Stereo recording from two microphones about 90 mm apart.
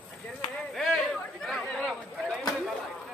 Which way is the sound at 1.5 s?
5° left (ahead or behind).